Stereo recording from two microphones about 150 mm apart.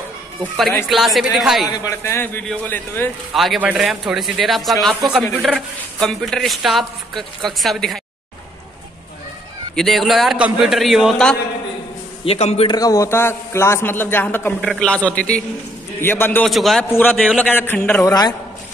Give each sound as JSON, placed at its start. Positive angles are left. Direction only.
{"t": 0.8, "sound": "a man's voice", "side_deg": 0}
{"t": 1.7, "sound": "a man's voice", "side_deg": 20}
{"t": 3.3, "sound": "a man's voice", "side_deg": -5}
{"t": 9.8, "sound": "a man's voice", "side_deg": 0}
{"t": 12.3, "sound": "a man's voice", "side_deg": 45}
{"t": 12.6, "sound": "a man's voice", "side_deg": 25}
{"t": 16.4, "sound": "a man's voice", "side_deg": 0}
{"t": 16.9, "sound": "a man's voice", "side_deg": 10}
{"t": 18.0, "sound": "a man's voice", "side_deg": 25}